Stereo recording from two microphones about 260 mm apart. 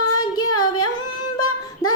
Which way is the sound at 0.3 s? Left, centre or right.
Left.